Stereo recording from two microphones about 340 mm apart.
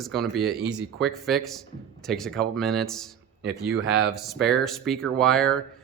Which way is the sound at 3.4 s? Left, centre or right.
Right.